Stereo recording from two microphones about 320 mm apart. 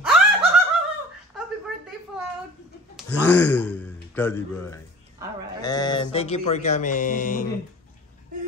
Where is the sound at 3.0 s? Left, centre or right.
Centre; by 7.4 s left.